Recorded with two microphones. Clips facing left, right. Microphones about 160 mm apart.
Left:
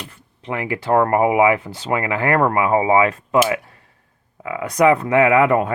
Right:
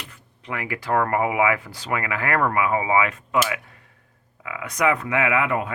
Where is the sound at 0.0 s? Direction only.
25° left (ahead or behind).